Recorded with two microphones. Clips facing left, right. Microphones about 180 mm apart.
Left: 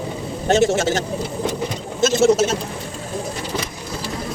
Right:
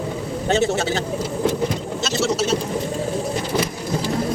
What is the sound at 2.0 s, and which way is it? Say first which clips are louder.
Speech: left 7 dB; 50° left (ahead or behind).